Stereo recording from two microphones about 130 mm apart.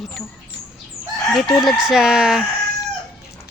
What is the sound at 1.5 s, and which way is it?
Chicken, centre (ahead or behind).